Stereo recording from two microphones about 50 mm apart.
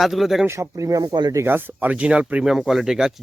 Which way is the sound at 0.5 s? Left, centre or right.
Right.